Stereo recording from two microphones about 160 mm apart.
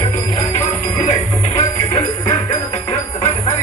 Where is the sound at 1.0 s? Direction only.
45° left (ahead or behind).